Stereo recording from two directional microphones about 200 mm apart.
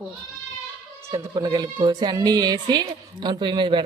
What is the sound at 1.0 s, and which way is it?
Speech, 15° right (ahead or behind).